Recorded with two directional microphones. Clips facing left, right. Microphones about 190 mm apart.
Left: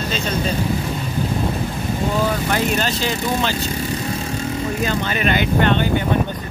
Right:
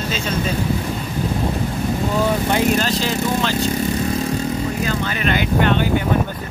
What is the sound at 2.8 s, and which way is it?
Speech, centre (ahead or behind).